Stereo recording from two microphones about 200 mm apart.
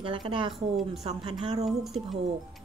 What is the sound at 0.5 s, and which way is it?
Speech, centre (ahead or behind).